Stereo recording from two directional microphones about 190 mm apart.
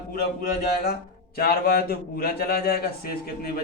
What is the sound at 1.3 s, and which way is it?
A man's voice, 55° left (ahead or behind).